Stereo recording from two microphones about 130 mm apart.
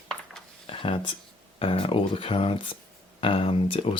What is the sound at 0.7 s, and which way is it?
Speech, 45° left (ahead or behind).